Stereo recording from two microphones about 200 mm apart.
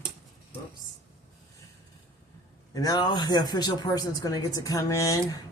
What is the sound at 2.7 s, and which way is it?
Speech, 20° left (ahead or behind).